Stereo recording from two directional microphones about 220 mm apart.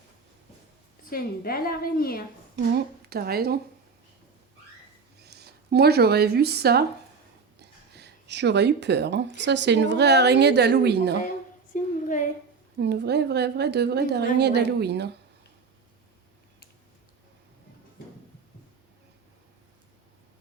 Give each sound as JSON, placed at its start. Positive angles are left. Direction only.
{"t": 1.1, "sound": "a woman's voice", "side_deg": 40}
{"t": 2.7, "sound": "a woman's voice", "side_deg": -45}
{"t": 5.2, "sound": "speech", "side_deg": -50}
{"t": 11.7, "sound": "a sound", "side_deg": 35}
{"t": 12.8, "sound": "a woman's voice", "side_deg": -50}